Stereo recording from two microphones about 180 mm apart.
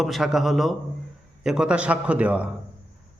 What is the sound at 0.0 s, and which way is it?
A man's voice, centre (ahead or behind).